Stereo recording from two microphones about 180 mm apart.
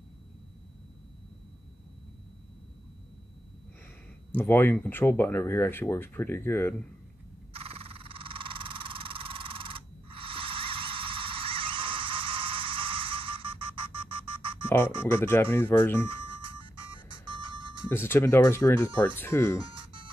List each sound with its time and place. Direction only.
4.3 s speech: 10° left (ahead or behind)
7.5 s a sound: 30° right (ahead or behind)
15.0 s speech: 10° left (ahead or behind)
17.8 s speech: 15° left (ahead or behind)
19.7 s music: 30° right (ahead or behind)